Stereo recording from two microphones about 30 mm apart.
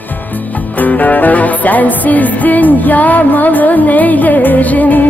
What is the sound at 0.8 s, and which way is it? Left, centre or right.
Music, left.